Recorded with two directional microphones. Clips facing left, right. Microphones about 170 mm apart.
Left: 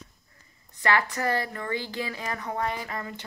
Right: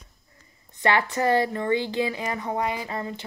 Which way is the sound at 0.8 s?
25° right (ahead or behind).